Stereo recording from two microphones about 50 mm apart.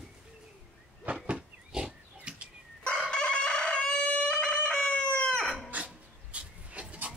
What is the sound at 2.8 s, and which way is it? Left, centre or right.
Chicken, left.